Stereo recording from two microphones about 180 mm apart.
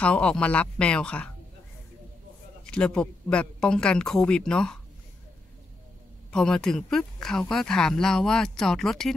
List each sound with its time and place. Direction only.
0.0 s speech: 5° left (ahead or behind)
2.6 s speech: 5° left (ahead or behind)
6.3 s speech: 5° left (ahead or behind)